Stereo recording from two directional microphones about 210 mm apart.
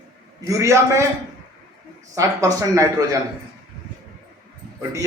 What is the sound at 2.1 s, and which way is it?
A man's voice, 15° right (ahead or behind).